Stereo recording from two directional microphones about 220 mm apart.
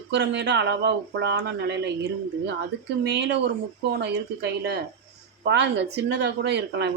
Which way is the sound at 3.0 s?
50° right (ahead or behind).